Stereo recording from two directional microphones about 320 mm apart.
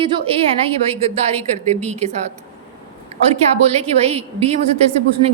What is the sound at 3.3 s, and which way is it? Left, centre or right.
A woman's voice, centre.